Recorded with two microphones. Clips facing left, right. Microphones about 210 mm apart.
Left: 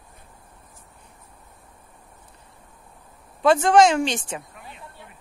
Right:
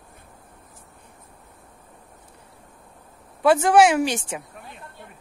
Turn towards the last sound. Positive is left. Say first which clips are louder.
# right 1 dB
turn(degrees=-10)  # may be behind; listen again after turning